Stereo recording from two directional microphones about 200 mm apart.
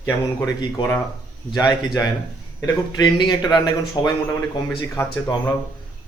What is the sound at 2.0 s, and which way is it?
A man's voice, 20° left (ahead or behind).